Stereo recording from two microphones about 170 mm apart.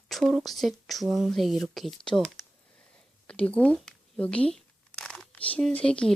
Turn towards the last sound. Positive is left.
turn(degrees=5)  # may be behind; listen again after turning